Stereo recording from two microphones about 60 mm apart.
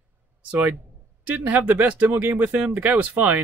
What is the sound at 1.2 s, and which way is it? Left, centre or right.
Speech, right.